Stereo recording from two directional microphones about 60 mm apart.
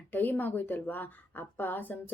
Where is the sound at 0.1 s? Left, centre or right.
Left.